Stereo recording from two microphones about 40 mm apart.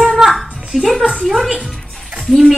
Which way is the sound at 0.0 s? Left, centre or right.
Centre.